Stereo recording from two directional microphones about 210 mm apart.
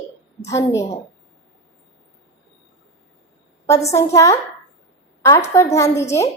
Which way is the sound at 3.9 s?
15° left (ahead or behind).